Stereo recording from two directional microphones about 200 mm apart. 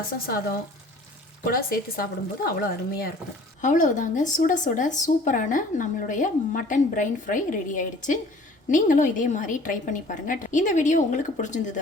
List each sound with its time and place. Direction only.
0.1 s speech: 50° left (ahead or behind)
1.5 s speech: 45° left (ahead or behind)